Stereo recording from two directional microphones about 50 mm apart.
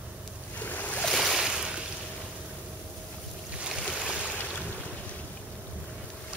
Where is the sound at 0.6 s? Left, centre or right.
Left.